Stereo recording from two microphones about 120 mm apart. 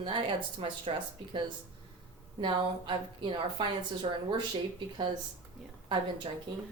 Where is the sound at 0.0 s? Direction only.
45° right (ahead or behind).